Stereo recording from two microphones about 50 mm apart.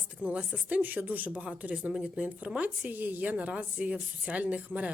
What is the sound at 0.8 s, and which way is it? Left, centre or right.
A woman's voice, right.